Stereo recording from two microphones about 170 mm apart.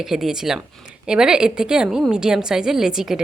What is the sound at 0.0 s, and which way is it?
Speech, centre (ahead or behind).